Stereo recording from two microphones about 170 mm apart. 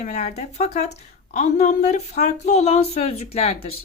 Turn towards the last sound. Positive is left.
turn(degrees=35)  # may be behind; listen again after turning